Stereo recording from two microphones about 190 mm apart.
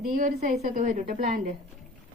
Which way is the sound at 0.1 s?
45° right (ahead or behind).